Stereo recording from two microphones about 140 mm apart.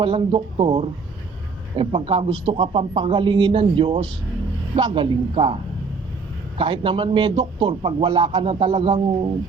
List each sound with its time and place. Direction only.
0.0 s a man's voice: 40° right (ahead or behind)
6.6 s a man's voice: 35° right (ahead or behind)